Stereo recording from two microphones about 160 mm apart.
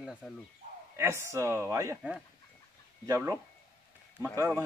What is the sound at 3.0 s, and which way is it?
Speech, 20° right (ahead or behind).